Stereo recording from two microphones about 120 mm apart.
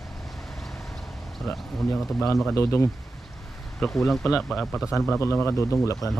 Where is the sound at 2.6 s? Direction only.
20° left (ahead or behind).